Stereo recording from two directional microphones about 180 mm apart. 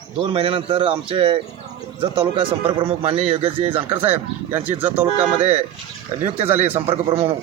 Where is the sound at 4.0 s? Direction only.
10° right (ahead or behind).